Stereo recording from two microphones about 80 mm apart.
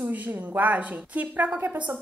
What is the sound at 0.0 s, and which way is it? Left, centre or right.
A woman's voice, right.